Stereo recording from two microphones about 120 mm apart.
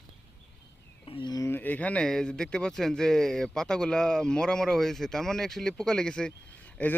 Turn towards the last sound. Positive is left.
turn(degrees=10)  # may be behind; listen again after turning